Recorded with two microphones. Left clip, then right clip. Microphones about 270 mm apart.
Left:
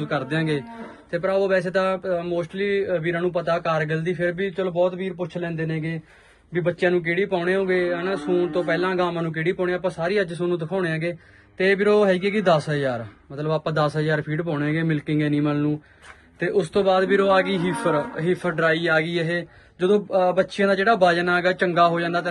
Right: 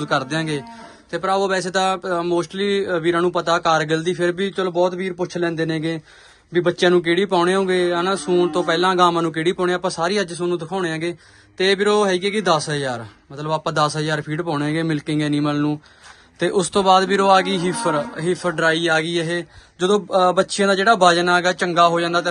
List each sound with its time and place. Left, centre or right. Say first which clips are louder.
0.0 s speech: right 4 dB; centre
6.5 s speech: right 5 dB; right